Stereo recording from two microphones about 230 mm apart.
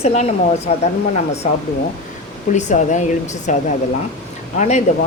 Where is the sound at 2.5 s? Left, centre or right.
Left.